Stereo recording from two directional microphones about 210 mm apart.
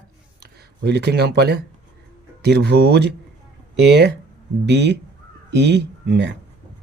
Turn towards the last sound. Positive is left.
turn(degrees=-55)  # may be behind; listen again after turning